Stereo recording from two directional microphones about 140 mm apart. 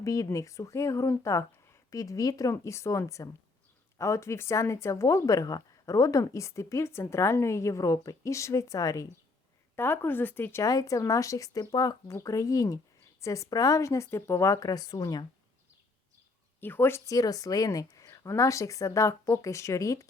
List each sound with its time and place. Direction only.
0.0 s speech: 25° left (ahead or behind)
16.6 s speech: 15° left (ahead or behind)